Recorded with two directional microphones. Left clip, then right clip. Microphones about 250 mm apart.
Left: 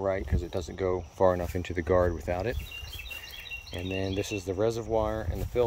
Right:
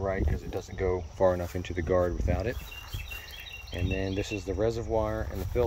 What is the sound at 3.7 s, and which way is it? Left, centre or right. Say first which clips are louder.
Speech: right 1 dB; centre.